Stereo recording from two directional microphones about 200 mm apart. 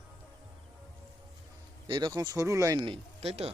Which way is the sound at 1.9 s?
20° right (ahead or behind).